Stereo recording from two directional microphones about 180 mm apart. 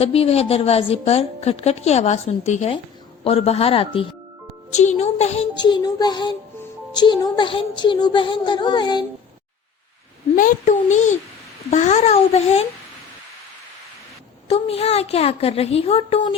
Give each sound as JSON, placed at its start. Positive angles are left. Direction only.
{"t": 0.0, "sound": "a woman's voice", "side_deg": 35}
{"t": 5.5, "sound": "a woman's voice", "side_deg": 25}
{"t": 10.3, "sound": "a woman's voice", "side_deg": 45}
{"t": 14.5, "sound": "a woman's voice", "side_deg": 35}